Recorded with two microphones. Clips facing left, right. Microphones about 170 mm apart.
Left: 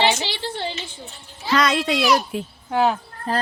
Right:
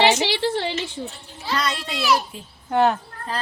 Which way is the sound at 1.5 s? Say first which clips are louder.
Left 6 dB; 90° left.